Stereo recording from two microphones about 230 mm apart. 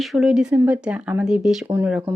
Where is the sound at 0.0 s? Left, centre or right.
Centre.